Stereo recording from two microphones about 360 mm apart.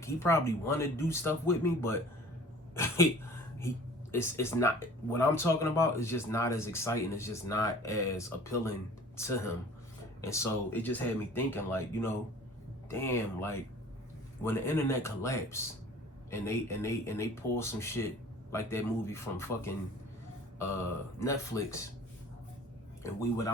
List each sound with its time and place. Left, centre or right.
0.0 s speech: centre
2.7 s a sound: centre
4.1 s speech: centre
21.2 s speech: centre
23.0 s speech: centre